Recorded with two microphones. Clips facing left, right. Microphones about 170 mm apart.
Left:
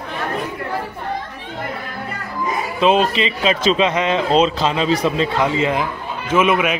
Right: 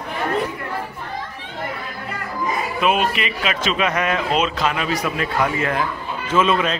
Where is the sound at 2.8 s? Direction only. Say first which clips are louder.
Left 5 dB; 30° left (ahead or behind).